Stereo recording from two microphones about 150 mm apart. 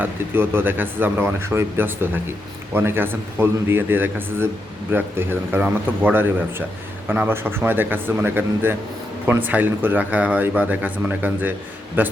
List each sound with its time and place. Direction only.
0.0 s speech: 15° right (ahead or behind)